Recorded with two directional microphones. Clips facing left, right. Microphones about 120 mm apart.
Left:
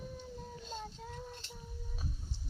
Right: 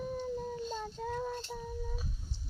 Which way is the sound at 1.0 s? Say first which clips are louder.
Right 10 dB; 80° right.